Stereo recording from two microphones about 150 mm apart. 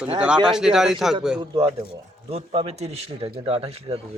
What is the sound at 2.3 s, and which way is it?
A man's voice, 40° right (ahead or behind).